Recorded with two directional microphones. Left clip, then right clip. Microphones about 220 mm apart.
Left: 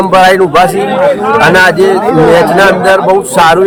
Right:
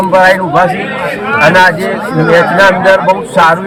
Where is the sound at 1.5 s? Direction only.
20° left (ahead or behind).